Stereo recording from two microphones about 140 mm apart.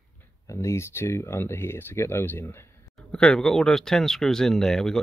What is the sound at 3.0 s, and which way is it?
Speech, 5° left (ahead or behind).